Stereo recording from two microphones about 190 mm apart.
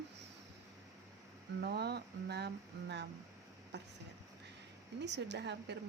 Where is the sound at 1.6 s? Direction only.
60° right (ahead or behind).